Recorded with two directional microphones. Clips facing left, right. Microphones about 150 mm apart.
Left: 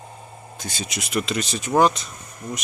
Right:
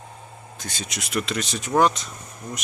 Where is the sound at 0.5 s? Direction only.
5° left (ahead or behind).